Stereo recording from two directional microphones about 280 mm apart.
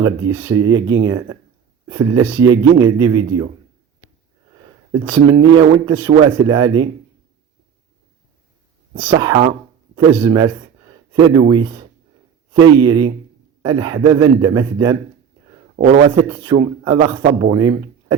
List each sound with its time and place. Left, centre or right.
0.0 s a man's voice: centre
5.1 s a man's voice: centre
9.0 s a man's voice: centre
15.7 s speech: right
16.0 s a man's voice: centre